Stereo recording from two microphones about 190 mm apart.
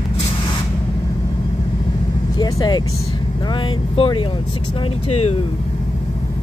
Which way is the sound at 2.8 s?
90° left.